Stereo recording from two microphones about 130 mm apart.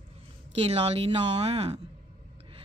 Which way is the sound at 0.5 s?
50° right (ahead or behind).